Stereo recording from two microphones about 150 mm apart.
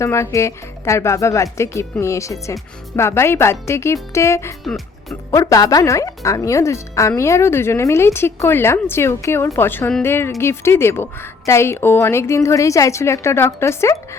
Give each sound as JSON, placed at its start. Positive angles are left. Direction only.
{"t": 0.0, "sound": "speech", "side_deg": 20}
{"t": 4.6, "sound": "music", "side_deg": 0}
{"t": 5.3, "sound": "speech", "side_deg": 20}